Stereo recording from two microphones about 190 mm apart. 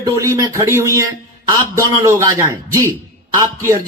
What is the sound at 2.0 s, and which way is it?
A man's voice, 15° right (ahead or behind).